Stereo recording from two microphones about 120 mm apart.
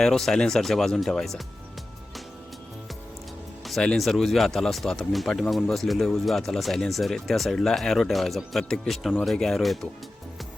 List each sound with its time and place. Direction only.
0.0 s speech: 5° left (ahead or behind)
3.7 s speech: 5° left (ahead or behind)